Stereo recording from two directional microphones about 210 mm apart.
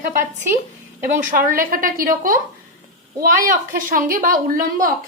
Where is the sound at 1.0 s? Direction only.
40° right (ahead or behind).